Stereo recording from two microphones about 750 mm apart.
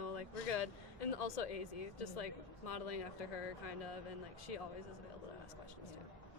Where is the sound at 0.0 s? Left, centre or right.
Left.